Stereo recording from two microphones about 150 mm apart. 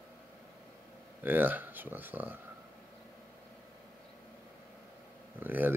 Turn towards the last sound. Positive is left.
turn(degrees=-10)  # may be behind; listen again after turning